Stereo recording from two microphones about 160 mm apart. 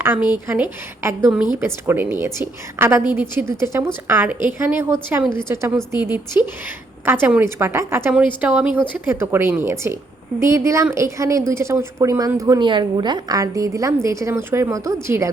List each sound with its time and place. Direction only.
0.0 s a woman's voice: 15° right (ahead or behind)